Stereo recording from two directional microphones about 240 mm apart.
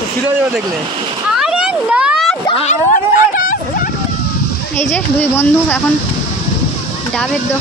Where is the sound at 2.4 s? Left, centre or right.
Left.